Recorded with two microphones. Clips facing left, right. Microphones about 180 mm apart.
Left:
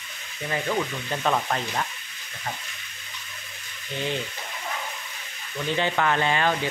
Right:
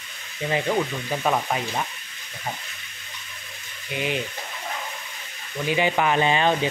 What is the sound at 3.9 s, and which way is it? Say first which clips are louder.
Speech: right 2 dB; 15° right (ahead or behind).